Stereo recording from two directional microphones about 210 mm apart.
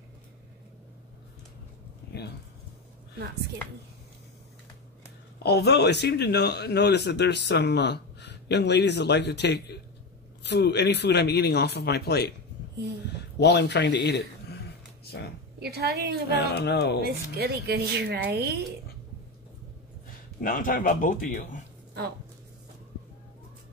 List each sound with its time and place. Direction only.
3.2 s speech: 50° right (ahead or behind)
5.4 s speech: 50° left (ahead or behind)
13.4 s speech: 55° left (ahead or behind)
15.6 s speech: 50° right (ahead or behind)
16.3 s speech: 50° left (ahead or behind)
17.0 s speech: 50° right (ahead or behind)
20.3 s a man's voice: 40° left (ahead or behind)